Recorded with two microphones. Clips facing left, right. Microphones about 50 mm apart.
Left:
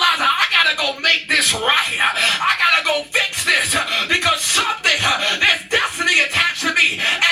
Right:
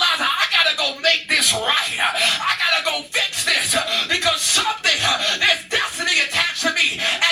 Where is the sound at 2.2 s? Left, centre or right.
Left.